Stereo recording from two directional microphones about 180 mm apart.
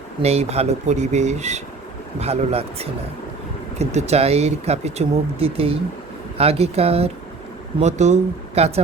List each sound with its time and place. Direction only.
0.2 s speech: 35° right (ahead or behind)